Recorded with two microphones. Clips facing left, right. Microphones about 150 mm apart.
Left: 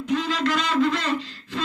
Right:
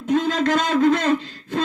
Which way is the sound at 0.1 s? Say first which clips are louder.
Right 5 dB; 50° right (ahead or behind).